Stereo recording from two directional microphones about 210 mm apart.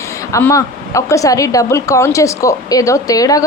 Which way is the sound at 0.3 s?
15° left (ahead or behind).